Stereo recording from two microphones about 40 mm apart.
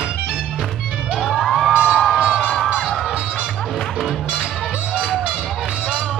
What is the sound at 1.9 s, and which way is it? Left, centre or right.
Crowd, centre.